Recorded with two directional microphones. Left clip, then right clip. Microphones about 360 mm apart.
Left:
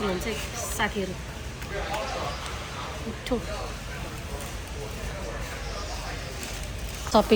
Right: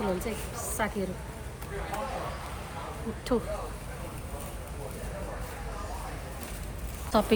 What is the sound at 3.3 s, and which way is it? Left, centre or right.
Speech, right.